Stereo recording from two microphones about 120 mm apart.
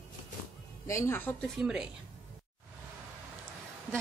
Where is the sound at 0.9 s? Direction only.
25° left (ahead or behind).